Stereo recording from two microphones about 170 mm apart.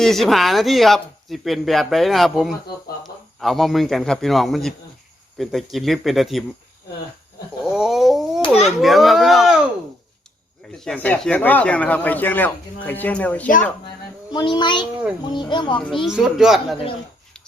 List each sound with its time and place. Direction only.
0.0 s a man's voice: centre (ahead or behind)
7.6 s a sound: 5° right (ahead or behind)
8.8 s speech: centre (ahead or behind)
10.7 s speech: 5° left (ahead or behind)
14.3 s a child's voice: 25° left (ahead or behind)
16.0 s speech: centre (ahead or behind)